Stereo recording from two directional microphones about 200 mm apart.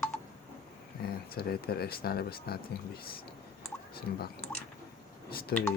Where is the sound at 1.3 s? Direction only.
50° left (ahead or behind).